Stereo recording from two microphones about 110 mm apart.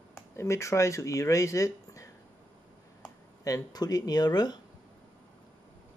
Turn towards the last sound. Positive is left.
turn(degrees=40)  # may be behind; listen again after turning